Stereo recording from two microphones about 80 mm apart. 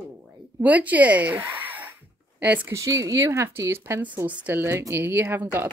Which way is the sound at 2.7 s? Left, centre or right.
Right.